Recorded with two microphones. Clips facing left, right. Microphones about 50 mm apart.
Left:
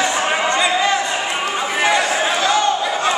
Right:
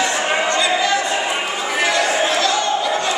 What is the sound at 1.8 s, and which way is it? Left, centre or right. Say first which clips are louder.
Chatter: left 1 dB; centre.